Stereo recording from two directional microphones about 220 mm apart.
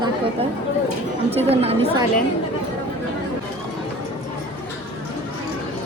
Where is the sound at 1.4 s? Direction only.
25° right (ahead or behind).